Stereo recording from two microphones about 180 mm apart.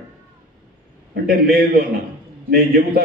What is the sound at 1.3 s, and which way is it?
A man's voice, 55° right (ahead or behind).